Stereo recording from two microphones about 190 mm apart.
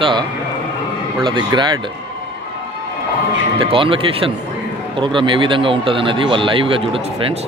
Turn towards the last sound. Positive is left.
turn(degrees=-25)  # may be behind; listen again after turning